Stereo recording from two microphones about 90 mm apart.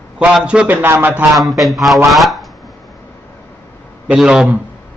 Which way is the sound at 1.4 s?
Centre (ahead or behind).